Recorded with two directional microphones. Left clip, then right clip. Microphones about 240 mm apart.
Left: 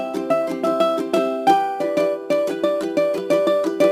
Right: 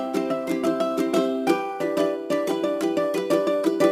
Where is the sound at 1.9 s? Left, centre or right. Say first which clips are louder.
Left 3 dB; centre.